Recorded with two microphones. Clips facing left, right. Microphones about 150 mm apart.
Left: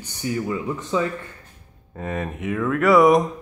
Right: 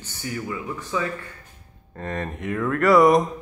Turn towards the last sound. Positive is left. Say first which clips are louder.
# left 1 dB
turn(degrees=0)  # may be behind; listen again after turning